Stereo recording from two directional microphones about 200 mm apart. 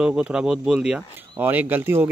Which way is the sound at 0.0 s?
5° right (ahead or behind).